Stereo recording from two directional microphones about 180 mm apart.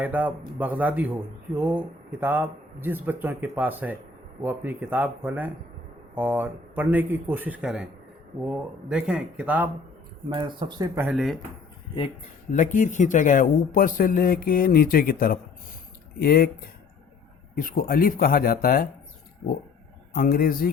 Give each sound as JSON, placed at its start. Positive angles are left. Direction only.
{"t": 0.0, "sound": "speech", "side_deg": -10}
{"t": 10.2, "sound": "speech", "side_deg": -25}
{"t": 10.9, "sound": "speech", "side_deg": -5}
{"t": 12.5, "sound": "speech", "side_deg": 45}
{"t": 20.1, "sound": "speech", "side_deg": 55}